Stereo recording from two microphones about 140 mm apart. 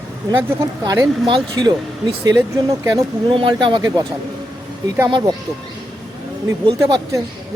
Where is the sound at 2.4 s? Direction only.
20° right (ahead or behind).